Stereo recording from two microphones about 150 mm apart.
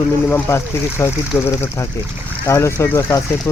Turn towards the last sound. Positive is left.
turn(degrees=20)  # may be behind; listen again after turning